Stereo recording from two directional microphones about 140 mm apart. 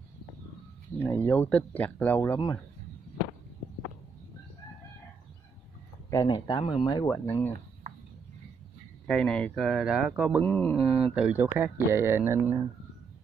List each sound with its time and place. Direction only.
0.9 s speech: 15° left (ahead or behind)
6.2 s speech: 30° left (ahead or behind)
7.1 s speech: 15° left (ahead or behind)
9.0 s speech: 5° left (ahead or behind)
10.4 s speech: 10° left (ahead or behind)
11.1 s speech: 10° right (ahead or behind)